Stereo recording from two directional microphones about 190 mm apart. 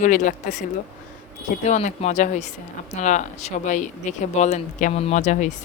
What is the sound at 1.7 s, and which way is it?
Speech, 35° left (ahead or behind).